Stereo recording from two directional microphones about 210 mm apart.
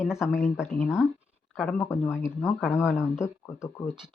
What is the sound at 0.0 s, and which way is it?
Speech, centre (ahead or behind).